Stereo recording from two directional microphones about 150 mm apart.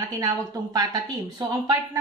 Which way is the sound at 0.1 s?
25° right (ahead or behind).